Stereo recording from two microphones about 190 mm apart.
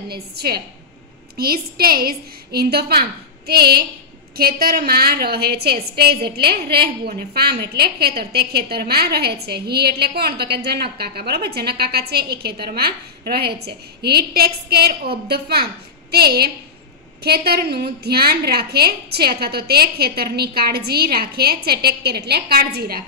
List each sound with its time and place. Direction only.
0.1 s a woman's voice: 55° right (ahead or behind)